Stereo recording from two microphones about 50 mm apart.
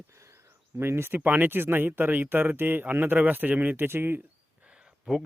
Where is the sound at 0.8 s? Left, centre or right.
Right.